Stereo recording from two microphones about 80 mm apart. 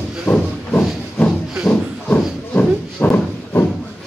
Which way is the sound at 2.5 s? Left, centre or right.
Centre.